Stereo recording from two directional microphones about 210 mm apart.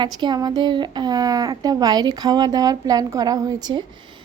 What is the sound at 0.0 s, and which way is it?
Speech, 20° right (ahead or behind).